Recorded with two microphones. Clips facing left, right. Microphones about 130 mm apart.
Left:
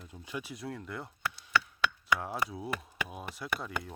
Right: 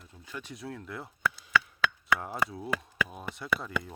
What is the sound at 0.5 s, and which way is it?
Speech, centre (ahead or behind).